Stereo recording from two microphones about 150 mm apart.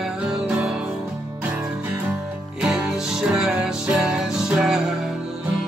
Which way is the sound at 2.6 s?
5° right (ahead or behind).